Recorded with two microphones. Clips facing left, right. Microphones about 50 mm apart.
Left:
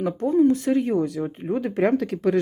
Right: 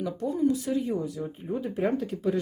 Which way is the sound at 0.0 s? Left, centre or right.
Left.